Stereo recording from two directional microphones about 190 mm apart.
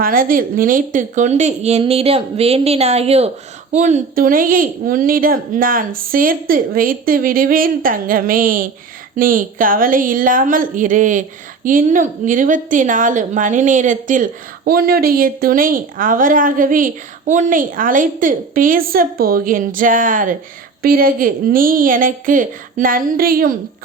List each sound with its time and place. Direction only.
0.0 s a woman's voice: 50° right (ahead or behind)